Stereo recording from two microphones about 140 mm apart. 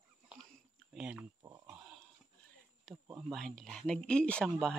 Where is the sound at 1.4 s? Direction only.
30° right (ahead or behind).